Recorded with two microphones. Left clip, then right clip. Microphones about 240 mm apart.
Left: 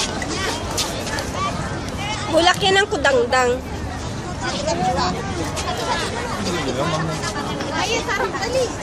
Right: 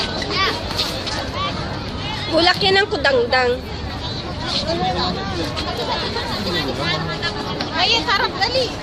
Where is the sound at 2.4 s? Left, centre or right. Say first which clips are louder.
Right 1 dB; centre.